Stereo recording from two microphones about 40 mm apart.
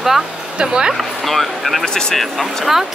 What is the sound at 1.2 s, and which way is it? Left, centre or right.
Speech, centre.